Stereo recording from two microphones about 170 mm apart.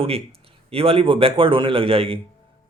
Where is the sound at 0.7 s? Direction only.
35° right (ahead or behind).